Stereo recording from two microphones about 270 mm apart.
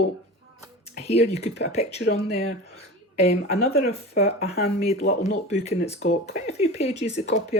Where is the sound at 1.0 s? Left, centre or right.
Left.